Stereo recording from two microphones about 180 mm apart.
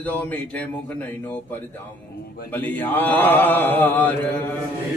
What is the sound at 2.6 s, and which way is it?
Speech, 10° left (ahead or behind).